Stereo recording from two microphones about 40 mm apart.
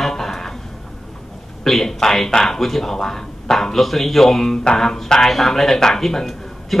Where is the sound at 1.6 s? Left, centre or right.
Centre.